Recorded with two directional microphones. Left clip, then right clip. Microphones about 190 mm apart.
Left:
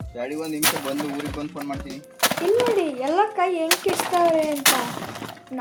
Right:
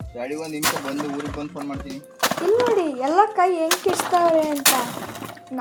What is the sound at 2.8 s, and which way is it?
Speech, 10° right (ahead or behind).